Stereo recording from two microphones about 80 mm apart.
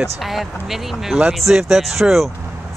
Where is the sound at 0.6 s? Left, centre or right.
Centre.